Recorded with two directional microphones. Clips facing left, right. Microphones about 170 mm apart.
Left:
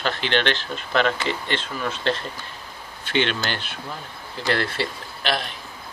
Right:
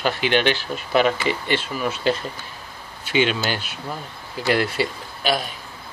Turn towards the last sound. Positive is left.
turn(degrees=-10)  # may be behind; listen again after turning